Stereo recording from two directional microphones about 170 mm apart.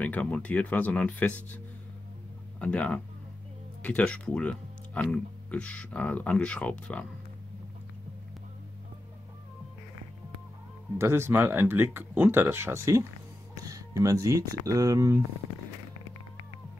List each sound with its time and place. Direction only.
0.0 s speech: 5° left (ahead or behind)
2.6 s speech: 5° left (ahead or behind)
11.0 s speech: 15° right (ahead or behind)